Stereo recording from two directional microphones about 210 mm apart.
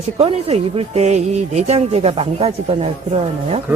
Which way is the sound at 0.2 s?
30° right (ahead or behind).